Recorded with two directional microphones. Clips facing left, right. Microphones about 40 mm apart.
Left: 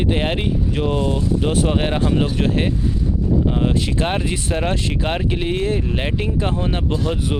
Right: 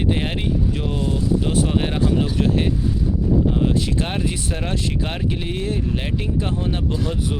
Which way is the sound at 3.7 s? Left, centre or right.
Left.